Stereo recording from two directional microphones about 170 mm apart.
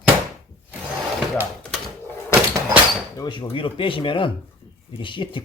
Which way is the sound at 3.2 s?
25° left (ahead or behind).